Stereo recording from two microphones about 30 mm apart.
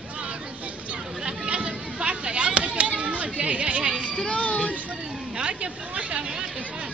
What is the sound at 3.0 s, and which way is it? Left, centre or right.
Chatter, right.